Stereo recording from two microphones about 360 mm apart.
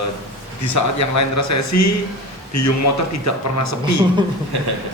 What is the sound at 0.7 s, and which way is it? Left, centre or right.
Speech, left.